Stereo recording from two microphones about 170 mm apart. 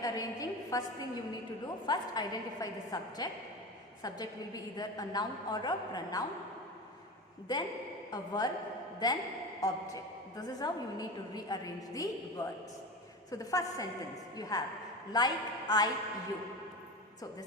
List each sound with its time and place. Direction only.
0.0 s a woman's voice: 20° left (ahead or behind)
7.5 s a woman's voice: 25° left (ahead or behind)